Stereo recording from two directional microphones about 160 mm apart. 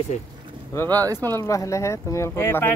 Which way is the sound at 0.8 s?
25° right (ahead or behind).